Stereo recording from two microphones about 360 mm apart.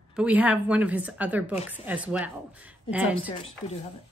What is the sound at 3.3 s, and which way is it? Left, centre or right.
Speech, centre.